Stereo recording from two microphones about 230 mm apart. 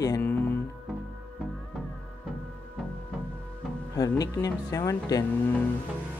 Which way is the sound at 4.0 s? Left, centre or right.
Centre.